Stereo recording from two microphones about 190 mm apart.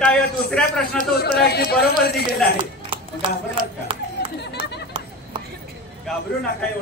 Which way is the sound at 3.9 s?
25° right (ahead or behind).